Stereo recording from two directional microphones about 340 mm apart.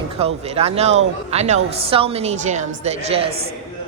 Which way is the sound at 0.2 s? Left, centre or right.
Centre.